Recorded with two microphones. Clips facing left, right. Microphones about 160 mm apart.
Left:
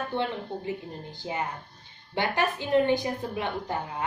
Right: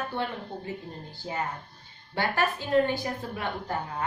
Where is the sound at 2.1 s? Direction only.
20° left (ahead or behind).